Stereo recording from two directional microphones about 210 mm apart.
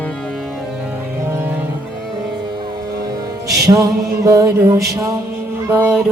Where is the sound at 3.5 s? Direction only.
15° right (ahead or behind).